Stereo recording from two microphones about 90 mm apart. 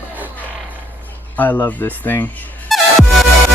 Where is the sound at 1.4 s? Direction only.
20° left (ahead or behind).